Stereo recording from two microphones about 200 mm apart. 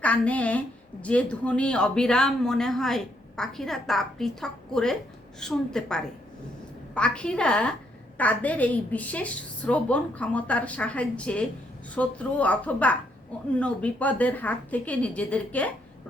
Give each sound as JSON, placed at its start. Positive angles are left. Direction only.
{"t": 0.0, "sound": "a woman's voice", "side_deg": 5}